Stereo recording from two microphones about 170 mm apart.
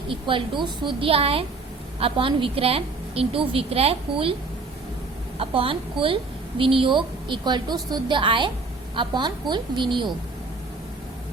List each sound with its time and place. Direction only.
0.1 s a woman's voice: 30° right (ahead or behind)
5.4 s a woman's voice: 30° right (ahead or behind)